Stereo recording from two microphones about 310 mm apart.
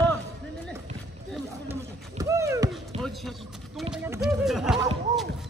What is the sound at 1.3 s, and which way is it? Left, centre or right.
Run, centre.